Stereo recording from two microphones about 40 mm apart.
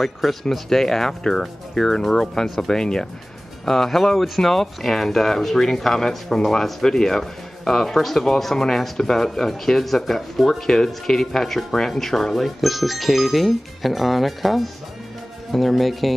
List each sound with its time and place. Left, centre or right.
0.0 s speech: centre
2.4 s speech: centre
2.7 s speech: centre